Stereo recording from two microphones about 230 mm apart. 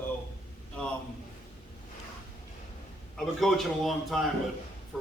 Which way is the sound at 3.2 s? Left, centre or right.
Centre.